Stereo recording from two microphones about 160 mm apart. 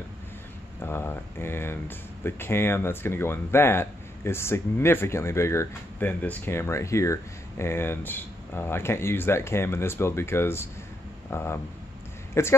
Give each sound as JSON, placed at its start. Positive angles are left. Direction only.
{"t": 0.7, "sound": "speech", "side_deg": 15}